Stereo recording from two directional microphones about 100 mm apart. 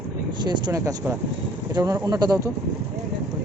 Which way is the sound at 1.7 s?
35° right (ahead or behind).